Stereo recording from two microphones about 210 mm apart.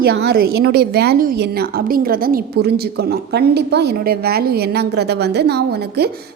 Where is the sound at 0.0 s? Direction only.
50° right (ahead or behind).